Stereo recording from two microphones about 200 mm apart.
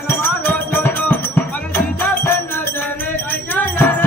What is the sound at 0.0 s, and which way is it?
Music, 10° left (ahead or behind).